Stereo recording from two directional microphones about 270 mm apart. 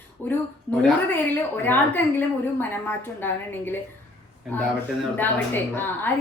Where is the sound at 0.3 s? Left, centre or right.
Centre.